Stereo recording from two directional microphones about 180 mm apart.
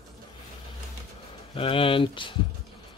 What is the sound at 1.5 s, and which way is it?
Speech, 30° left (ahead or behind).